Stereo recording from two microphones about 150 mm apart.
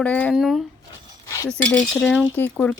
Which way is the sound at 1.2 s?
20° left (ahead or behind).